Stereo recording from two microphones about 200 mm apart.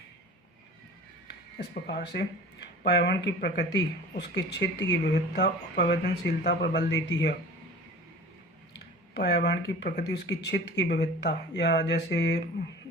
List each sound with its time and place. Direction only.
1.5 s speech: 55° left (ahead or behind)
9.1 s speech: 55° left (ahead or behind)